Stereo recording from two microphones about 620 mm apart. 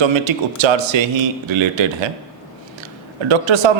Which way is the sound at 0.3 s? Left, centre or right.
Right.